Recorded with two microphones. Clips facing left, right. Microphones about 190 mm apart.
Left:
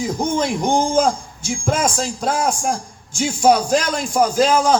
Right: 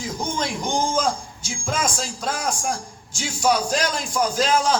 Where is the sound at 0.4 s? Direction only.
55° left (ahead or behind).